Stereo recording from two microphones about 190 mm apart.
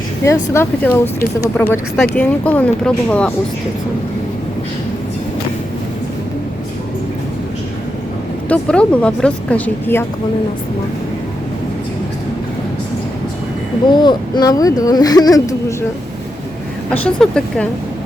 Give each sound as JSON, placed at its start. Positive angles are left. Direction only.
{"t": 0.3, "sound": "speech", "side_deg": 15}
{"t": 8.4, "sound": "speech", "side_deg": 5}
{"t": 14.0, "sound": "speech", "side_deg": 20}
{"t": 16.9, "sound": "speech", "side_deg": 5}